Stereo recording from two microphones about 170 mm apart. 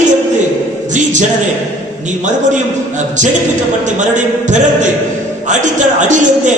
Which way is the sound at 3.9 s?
45° right (ahead or behind).